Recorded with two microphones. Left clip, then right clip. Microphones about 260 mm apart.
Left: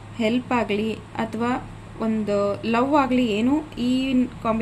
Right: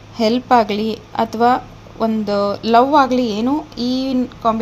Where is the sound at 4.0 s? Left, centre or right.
Centre.